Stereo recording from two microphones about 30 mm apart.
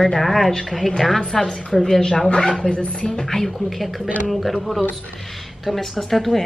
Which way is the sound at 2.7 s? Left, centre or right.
Left.